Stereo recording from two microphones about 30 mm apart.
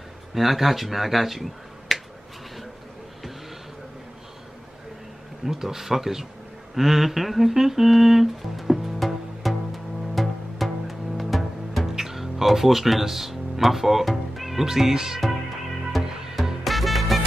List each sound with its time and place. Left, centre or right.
0.3 s speech: centre
5.4 s speech: centre
6.7 s humming: centre
10.1 s music: centre
14.6 s speech: centre
16.1 s music: centre
16.6 s music: centre